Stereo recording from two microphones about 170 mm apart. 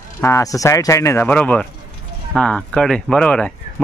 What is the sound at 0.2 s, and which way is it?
Speech, 20° left (ahead or behind).